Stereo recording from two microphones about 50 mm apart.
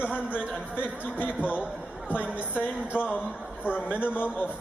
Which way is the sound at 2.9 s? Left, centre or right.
Left.